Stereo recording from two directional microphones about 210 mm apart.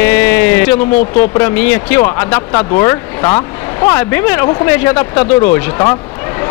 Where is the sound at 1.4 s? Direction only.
10° left (ahead or behind).